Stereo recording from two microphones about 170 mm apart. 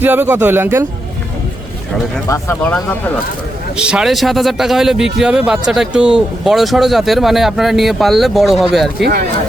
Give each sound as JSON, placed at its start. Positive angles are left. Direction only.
{"t": 0.0, "sound": "speech", "side_deg": -10}
{"t": 2.2, "sound": "speech", "side_deg": 15}
{"t": 3.8, "sound": "a man's voice", "side_deg": -5}